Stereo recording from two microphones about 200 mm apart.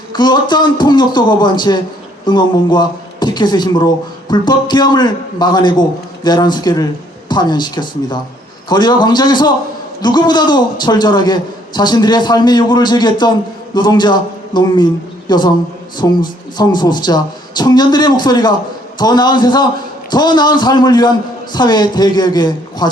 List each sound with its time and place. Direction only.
0.1 s a man's voice: 20° left (ahead or behind)